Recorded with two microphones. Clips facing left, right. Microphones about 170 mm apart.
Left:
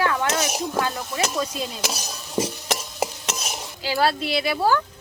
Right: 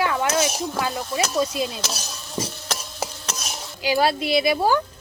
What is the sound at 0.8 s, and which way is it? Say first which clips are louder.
Speech: right 1 dB; 10° right (ahead or behind).